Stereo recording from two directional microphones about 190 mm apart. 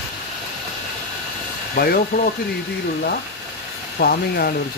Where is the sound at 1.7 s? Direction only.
50° left (ahead or behind).